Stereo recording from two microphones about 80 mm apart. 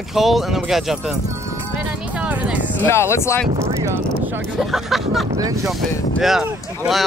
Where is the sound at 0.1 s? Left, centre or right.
Centre.